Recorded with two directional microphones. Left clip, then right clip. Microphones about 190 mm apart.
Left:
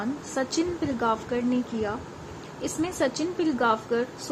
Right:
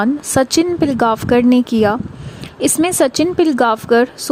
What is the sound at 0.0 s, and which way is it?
A woman's voice, 60° right (ahead or behind).